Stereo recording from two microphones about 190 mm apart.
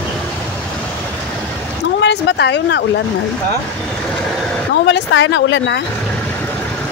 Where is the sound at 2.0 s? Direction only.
65° left (ahead or behind).